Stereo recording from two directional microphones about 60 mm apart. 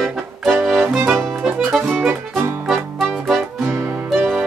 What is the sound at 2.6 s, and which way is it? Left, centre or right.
Music, centre.